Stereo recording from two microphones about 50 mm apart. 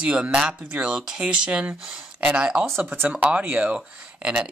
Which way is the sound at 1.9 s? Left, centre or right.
Right.